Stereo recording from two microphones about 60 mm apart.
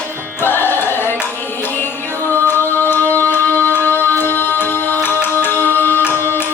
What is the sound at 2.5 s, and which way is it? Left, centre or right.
Music, left.